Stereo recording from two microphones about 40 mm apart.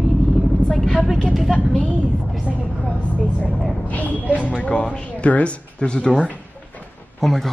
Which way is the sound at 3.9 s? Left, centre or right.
Left.